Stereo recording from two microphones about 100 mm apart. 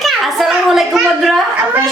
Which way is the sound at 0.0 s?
Centre (ahead or behind).